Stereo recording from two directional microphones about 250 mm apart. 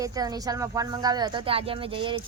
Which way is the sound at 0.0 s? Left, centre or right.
Centre.